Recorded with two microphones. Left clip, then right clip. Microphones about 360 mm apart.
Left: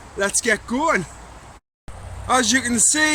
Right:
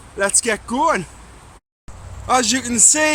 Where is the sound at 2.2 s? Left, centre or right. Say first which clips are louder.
Right 1 dB; centre.